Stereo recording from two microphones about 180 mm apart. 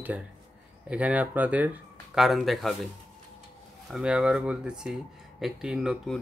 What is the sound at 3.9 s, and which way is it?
Speech, 5° right (ahead or behind).